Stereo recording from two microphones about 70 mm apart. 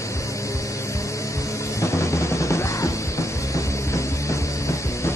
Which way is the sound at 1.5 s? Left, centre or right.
Left.